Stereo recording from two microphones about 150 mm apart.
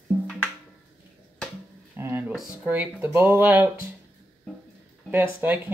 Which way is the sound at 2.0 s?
15° right (ahead or behind).